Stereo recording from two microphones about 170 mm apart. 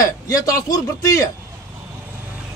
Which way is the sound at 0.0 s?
20° left (ahead or behind).